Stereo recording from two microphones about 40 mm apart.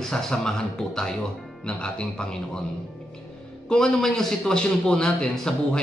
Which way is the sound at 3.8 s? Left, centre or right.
Centre.